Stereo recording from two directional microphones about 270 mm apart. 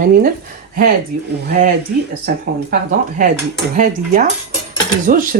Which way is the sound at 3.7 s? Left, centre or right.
Right.